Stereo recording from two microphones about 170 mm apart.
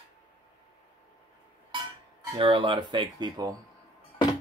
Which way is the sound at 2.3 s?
30° right (ahead or behind).